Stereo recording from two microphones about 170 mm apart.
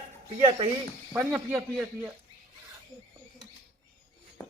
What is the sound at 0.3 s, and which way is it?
Speech, 35° right (ahead or behind).